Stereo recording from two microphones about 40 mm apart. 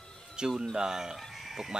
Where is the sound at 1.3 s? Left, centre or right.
Centre.